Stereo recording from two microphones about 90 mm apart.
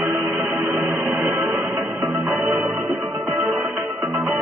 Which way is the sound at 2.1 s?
5° right (ahead or behind).